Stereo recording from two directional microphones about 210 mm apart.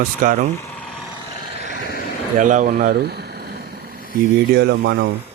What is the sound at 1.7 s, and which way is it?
Vehicle, 45° left (ahead or behind).